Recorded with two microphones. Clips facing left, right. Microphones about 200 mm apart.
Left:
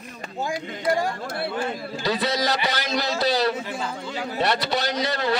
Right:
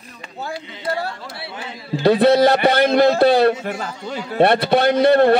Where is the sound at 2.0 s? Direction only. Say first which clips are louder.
Right 12 dB; 60° right (ahead or behind).